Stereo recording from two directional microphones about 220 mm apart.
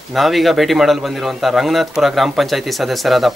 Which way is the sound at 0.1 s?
Centre (ahead or behind).